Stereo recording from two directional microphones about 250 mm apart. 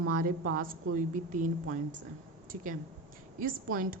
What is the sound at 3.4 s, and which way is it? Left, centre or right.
Speech, right.